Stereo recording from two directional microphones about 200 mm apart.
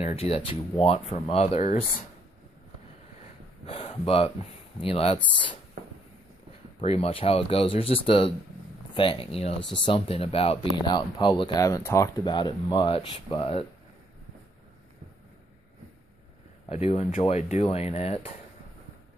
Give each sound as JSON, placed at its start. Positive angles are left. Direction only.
{"t": 0.0, "sound": "speech", "side_deg": 30}
{"t": 3.6, "sound": "speech", "side_deg": 30}
{"t": 6.8, "sound": "speech", "side_deg": 30}
{"t": 16.6, "sound": "speech", "side_deg": 35}